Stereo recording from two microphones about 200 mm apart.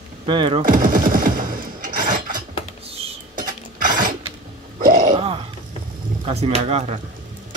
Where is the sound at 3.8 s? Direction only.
40° right (ahead or behind).